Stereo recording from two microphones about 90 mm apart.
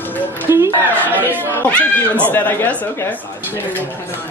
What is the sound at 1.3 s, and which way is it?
Speech, 20° right (ahead or behind).